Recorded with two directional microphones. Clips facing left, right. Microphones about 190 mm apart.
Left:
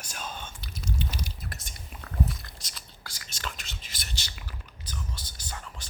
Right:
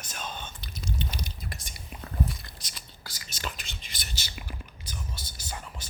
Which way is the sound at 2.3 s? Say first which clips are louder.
Left 1 dB; centre (ahead or behind).